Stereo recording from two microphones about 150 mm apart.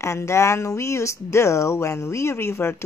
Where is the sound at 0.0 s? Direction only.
20° left (ahead or behind).